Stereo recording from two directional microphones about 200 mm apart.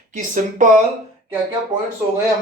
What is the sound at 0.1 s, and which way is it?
Speech, 40° right (ahead or behind).